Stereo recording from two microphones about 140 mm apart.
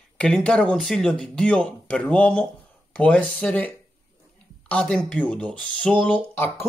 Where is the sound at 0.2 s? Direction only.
5° left (ahead or behind).